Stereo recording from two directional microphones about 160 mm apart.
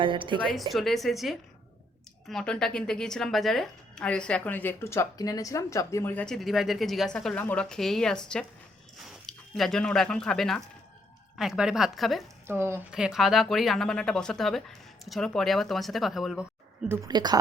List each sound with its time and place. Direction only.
0.0 s speech: 30° right (ahead or behind)
0.7 s a woman's voice: centre (ahead or behind)
12.5 s speech: 15° right (ahead or behind)
12.9 s a woman's voice: 5° right (ahead or behind)
17.1 s speech: 25° right (ahead or behind)